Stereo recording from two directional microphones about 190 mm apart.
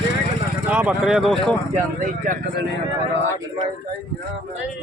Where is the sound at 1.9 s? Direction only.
45° right (ahead or behind).